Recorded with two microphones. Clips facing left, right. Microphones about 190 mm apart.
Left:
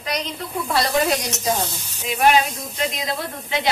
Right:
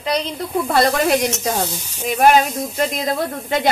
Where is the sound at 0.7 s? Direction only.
55° right (ahead or behind).